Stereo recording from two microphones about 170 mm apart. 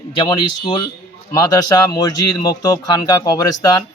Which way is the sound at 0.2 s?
30° left (ahead or behind).